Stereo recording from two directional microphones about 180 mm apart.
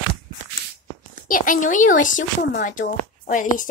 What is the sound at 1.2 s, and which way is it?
Speech, 50° left (ahead or behind).